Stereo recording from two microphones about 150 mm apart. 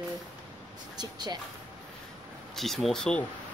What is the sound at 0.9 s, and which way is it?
Speech, 30° right (ahead or behind).